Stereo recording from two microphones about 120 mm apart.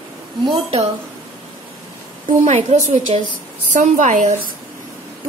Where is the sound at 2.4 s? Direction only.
85° right.